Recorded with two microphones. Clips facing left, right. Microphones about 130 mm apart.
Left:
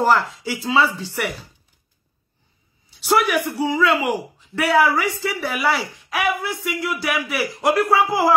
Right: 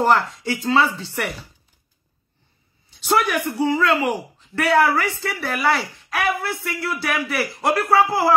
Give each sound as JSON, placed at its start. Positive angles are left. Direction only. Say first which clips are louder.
{"t": 0.0, "sound": "speech", "louder": "even", "side_deg": 0}
{"t": 2.9, "sound": "speech", "louder": "left 1 dB", "side_deg": 10}